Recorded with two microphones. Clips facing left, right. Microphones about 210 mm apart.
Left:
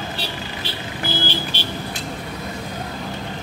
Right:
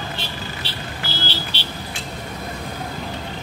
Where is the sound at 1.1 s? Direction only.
50° left (ahead or behind).